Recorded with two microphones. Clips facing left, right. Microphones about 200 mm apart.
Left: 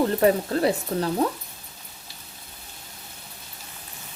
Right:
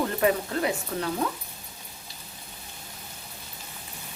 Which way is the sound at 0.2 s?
35° left (ahead or behind).